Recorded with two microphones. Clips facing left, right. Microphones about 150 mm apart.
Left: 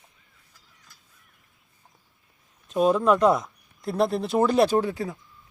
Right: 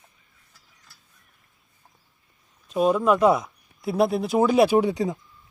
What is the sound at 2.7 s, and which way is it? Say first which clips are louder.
Speech: even; centre (ahead or behind).